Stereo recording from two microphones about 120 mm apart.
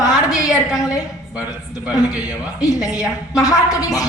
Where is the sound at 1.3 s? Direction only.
10° right (ahead or behind).